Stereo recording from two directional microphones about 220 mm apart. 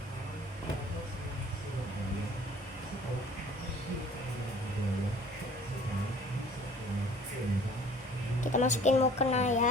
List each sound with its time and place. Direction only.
8.5 s a woman's voice: 35° left (ahead or behind)